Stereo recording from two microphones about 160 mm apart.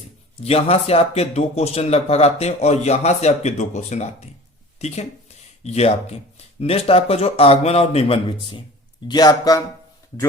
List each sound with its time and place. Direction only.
0.4 s speech: 40° left (ahead or behind); by 9.6 s 25° left (ahead or behind)